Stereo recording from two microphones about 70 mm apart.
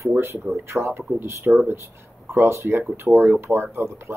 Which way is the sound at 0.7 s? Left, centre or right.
Right.